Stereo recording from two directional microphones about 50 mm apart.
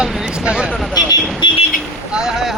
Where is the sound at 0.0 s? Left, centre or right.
Centre.